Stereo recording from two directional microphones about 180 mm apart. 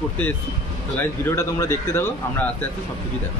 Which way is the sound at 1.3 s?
15° left (ahead or behind).